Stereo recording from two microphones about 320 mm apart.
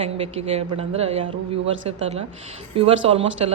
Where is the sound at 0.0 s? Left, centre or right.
Centre.